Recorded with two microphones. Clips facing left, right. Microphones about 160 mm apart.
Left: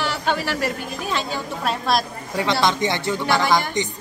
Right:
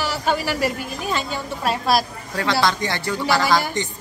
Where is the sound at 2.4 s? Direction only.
20° left (ahead or behind).